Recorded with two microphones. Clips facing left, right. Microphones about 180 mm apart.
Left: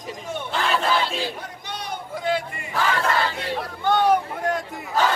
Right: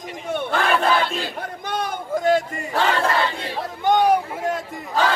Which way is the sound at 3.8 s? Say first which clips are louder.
Right 2 dB; 15° right (ahead or behind).